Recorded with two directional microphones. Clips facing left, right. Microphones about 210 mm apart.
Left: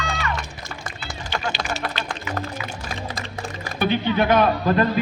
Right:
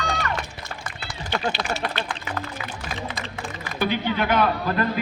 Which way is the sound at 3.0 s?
40° left (ahead or behind).